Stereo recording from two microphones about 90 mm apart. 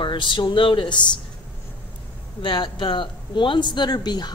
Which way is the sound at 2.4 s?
65° left (ahead or behind).